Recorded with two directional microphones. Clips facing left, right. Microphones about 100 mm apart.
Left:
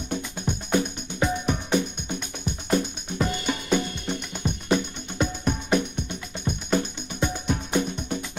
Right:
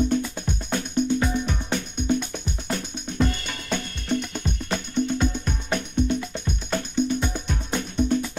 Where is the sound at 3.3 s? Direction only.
15° left (ahead or behind).